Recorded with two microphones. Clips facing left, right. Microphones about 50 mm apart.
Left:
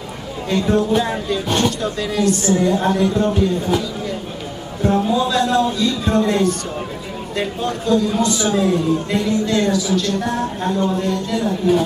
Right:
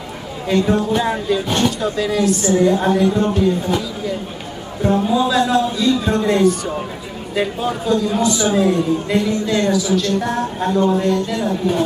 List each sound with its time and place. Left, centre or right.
0.5 s a man's voice: centre